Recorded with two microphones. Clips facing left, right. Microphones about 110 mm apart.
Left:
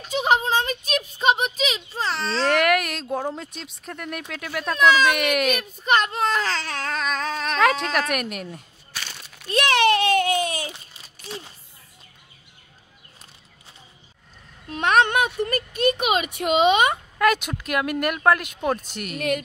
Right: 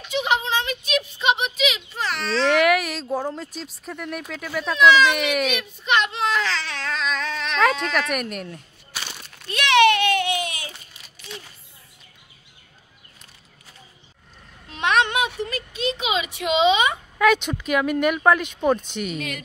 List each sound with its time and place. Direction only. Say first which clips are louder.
0.0 s a sound: left 2 dB; 40° left (ahead or behind)
2.4 s a sound: right 2 dB; centre (ahead or behind)
3.3 s speech: right 2 dB; centre (ahead or behind)
5.6 s baby cry: left 1 dB; 40° left (ahead or behind)
7.5 s speech: even; centre (ahead or behind)
9.5 s a sound: right 2 dB; 35° left (ahead or behind)
14.7 s speech: left 2 dB; 45° left (ahead or behind)
17.2 s speech: right 2 dB; 5° left (ahead or behind)
19.1 s speech: left 6 dB; 50° left (ahead or behind)